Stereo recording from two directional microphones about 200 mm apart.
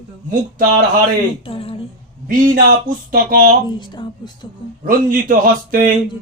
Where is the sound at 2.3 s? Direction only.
45° right (ahead or behind).